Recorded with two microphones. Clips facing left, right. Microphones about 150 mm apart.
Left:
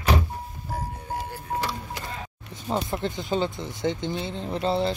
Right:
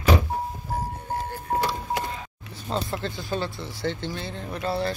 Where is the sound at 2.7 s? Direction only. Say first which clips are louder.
Left 2 dB; 20° left (ahead or behind).